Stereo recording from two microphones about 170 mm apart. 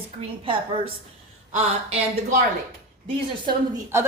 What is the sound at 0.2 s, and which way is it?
Speech, 30° right (ahead or behind).